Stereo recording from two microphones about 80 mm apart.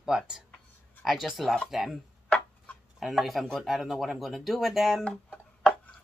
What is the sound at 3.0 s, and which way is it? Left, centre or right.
Speech, centre.